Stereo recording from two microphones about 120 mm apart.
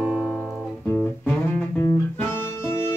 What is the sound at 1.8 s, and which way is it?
Music, 20° left (ahead or behind).